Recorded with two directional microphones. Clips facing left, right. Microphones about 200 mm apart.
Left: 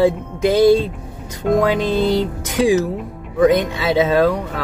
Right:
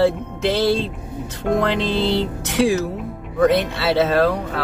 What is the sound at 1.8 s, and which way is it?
Music, 45° left (ahead or behind).